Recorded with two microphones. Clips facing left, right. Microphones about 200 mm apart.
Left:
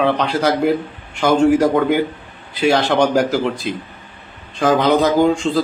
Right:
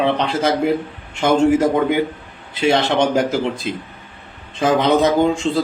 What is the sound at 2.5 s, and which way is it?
Speech, 25° right (ahead or behind).